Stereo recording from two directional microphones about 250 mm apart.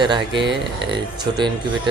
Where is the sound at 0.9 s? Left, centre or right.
Centre.